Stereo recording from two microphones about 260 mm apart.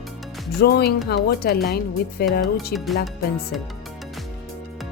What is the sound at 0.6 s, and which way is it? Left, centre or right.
Speech, left.